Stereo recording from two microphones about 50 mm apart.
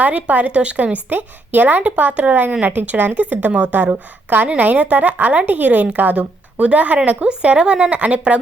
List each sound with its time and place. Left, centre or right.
0.0 s speech: right
1.1 s speech: right